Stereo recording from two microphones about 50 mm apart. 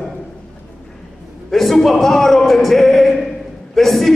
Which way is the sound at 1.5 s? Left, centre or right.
Centre.